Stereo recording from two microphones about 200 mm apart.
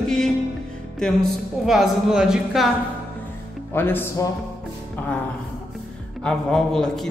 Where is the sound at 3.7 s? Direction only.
10° left (ahead or behind).